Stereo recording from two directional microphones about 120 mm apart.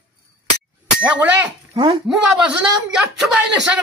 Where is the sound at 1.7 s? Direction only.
40° right (ahead or behind).